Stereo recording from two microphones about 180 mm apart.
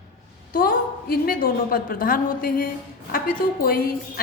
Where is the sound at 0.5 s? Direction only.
55° left (ahead or behind).